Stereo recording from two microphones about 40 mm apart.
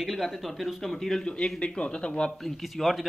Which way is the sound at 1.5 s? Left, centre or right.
Left.